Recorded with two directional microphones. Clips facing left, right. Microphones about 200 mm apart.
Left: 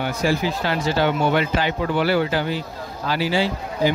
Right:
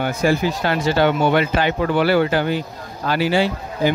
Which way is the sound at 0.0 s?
50° right (ahead or behind).